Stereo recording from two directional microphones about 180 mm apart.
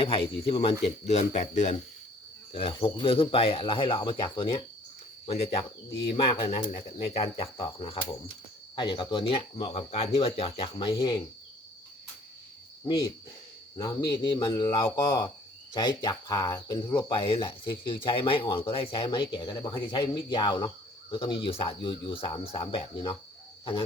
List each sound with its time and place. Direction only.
0.0 s speech: 30° left (ahead or behind)
5.2 s cricket: 35° left (ahead or behind)
6.1 s speech: 30° left (ahead or behind)
6.7 s speech: 40° left (ahead or behind)
13.7 s speech: 20° left (ahead or behind)
17.1 s speech: 30° left (ahead or behind)